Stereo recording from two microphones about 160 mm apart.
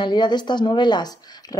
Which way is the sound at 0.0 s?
30° left (ahead or behind).